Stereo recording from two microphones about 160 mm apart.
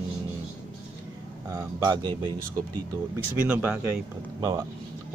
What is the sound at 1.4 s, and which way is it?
Speech, 20° right (ahead or behind).